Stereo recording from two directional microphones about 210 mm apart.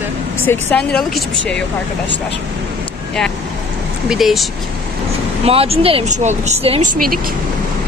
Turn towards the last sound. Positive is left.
turn(degrees=-30)  # may be behind; listen again after turning